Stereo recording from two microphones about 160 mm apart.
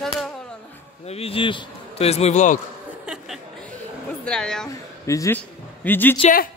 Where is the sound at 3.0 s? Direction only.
5° right (ahead or behind).